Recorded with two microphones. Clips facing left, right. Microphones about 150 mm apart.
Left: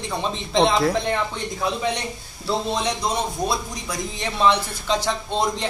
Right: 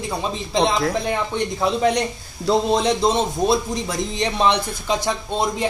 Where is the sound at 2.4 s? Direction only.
40° right (ahead or behind).